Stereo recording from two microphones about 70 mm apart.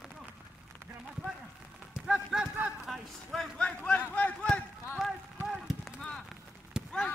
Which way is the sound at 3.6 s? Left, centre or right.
Centre.